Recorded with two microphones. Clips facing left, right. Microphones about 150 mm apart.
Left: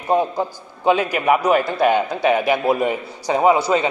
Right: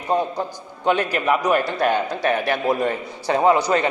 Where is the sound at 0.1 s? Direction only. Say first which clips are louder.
Left 3 dB; 10° left (ahead or behind).